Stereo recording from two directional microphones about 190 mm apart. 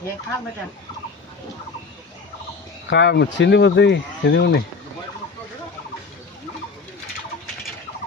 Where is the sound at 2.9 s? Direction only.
65° left (ahead or behind).